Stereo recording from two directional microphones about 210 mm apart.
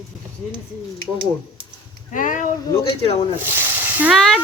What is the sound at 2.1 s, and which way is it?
Speech, 40° left (ahead or behind).